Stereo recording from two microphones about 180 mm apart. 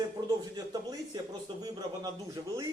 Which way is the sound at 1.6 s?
20° right (ahead or behind).